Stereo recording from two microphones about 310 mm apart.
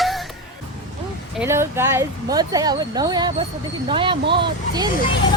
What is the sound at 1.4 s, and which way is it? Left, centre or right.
Speech, centre.